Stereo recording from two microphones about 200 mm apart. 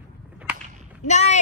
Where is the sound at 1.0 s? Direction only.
35° left (ahead or behind).